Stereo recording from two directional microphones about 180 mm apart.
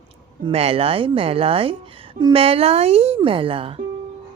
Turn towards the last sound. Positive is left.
turn(degrees=-30)  # may be behind; listen again after turning